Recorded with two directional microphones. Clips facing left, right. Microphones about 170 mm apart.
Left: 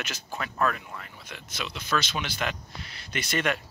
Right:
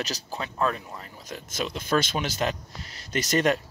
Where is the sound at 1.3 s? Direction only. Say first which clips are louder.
Right 6 dB; 45° right (ahead or behind).